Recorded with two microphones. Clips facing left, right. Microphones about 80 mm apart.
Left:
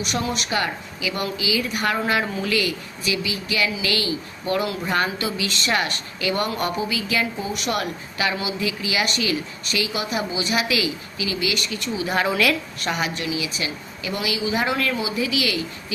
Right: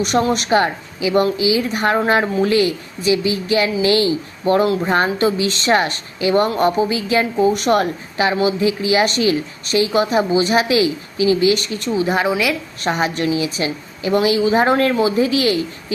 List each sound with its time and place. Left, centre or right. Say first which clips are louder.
0.0 s a woman's voice: right 9 dB; right
12.1 s a woman's voice: left 2 dB; centre
12.8 s a woman's voice: right 9 dB; right